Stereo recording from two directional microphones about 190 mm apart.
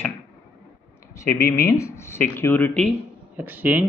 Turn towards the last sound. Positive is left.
turn(degrees=-10)  # may be behind; listen again after turning